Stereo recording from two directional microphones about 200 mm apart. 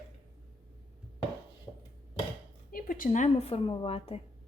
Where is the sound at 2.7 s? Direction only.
45° left (ahead or behind); by 4.2 s 30° left (ahead or behind).